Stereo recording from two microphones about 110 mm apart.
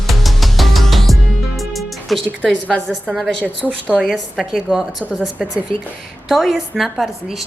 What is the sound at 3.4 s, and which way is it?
Speech, 15° right (ahead or behind).